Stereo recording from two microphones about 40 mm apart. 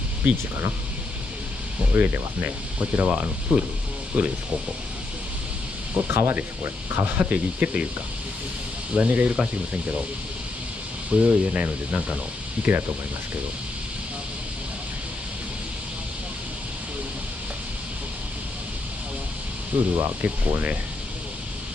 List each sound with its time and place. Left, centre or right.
0.2 s speech: right
1.9 s speech: right
5.9 s speech: right
6.6 s speech: right
7.2 s speech: right
8.9 s speech: right
11.1 s speech: right
12.7 s speech: right
19.7 s speech: right